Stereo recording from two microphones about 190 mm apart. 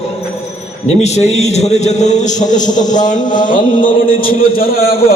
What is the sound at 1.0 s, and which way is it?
A man's voice, 35° left (ahead or behind).